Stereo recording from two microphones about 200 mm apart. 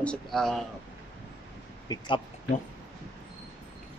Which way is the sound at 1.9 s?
20° left (ahead or behind).